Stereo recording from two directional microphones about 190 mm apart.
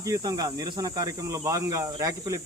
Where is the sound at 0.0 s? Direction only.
20° right (ahead or behind).